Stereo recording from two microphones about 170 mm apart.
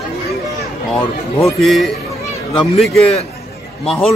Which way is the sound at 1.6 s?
Centre (ahead or behind).